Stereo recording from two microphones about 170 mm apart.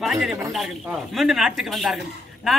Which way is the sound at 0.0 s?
Centre (ahead or behind).